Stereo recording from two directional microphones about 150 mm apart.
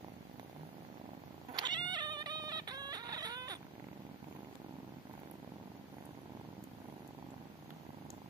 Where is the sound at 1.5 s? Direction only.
30° right (ahead or behind).